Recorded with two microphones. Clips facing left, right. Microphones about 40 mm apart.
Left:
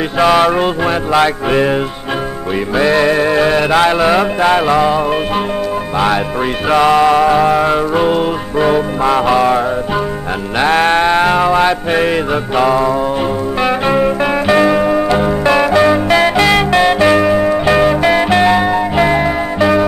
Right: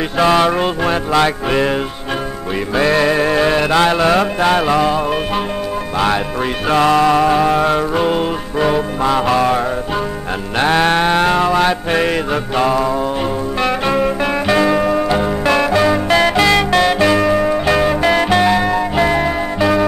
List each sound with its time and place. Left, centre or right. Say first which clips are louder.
0.2 s music: left 2 dB; centre
3.0 s music: left 2 dB; centre
6.7 s music: left 2 dB; centre
7.2 s music: left 2 dB; centre
10.6 s music: left 2 dB; centre